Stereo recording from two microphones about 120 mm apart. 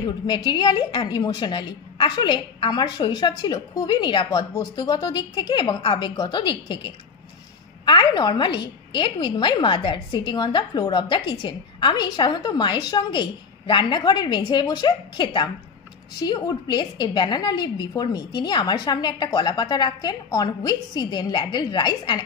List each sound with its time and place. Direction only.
0.0 s a woman's voice: 40° left (ahead or behind)